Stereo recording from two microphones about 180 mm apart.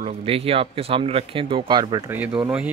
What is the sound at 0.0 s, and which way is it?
Speech, 30° right (ahead or behind).